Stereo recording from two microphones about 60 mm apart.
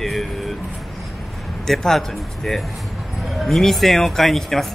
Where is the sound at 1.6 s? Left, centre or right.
Centre.